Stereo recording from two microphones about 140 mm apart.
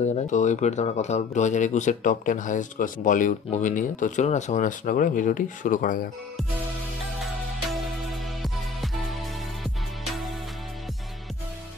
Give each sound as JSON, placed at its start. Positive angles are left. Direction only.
{"t": 0.0, "sound": "speech", "side_deg": 60}